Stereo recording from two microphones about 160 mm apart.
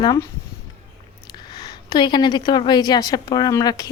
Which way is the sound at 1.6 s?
25° left (ahead or behind).